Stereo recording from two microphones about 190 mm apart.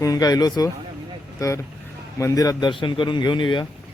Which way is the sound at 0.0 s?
20° left (ahead or behind).